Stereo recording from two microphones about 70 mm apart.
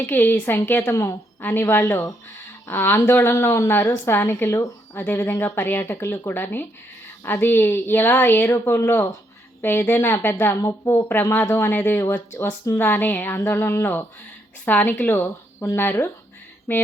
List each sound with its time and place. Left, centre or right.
0.0 s a woman's voice: left